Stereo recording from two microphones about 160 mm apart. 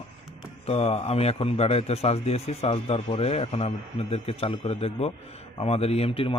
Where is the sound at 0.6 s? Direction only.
40° left (ahead or behind).